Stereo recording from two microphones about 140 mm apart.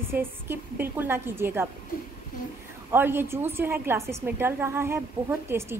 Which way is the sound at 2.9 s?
15° right (ahead or behind).